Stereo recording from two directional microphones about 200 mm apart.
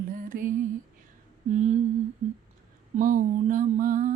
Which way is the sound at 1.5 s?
35° right (ahead or behind).